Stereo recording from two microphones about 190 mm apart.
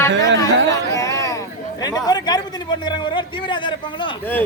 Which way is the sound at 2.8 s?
25° left (ahead or behind).